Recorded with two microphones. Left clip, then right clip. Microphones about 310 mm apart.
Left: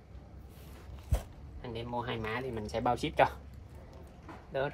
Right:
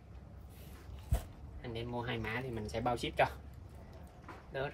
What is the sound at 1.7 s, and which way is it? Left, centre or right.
Speech, centre.